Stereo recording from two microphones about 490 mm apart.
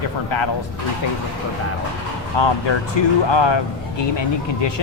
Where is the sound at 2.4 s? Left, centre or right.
Left.